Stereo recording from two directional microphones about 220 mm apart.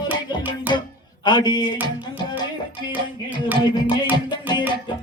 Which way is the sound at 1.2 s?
20° left (ahead or behind).